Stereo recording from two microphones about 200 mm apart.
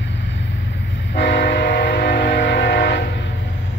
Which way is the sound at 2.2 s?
60° left (ahead or behind).